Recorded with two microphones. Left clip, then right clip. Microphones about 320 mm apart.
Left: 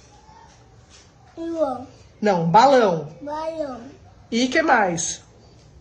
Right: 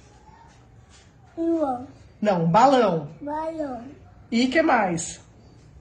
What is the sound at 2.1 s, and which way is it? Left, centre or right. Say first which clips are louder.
Speech: left 3 dB; centre.